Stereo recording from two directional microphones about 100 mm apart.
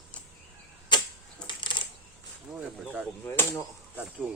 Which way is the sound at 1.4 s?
55° left (ahead or behind).